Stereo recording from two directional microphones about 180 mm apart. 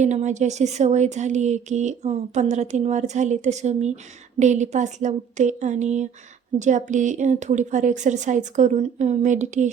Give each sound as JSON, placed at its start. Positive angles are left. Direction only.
{"t": 0.0, "sound": "speech", "side_deg": -40}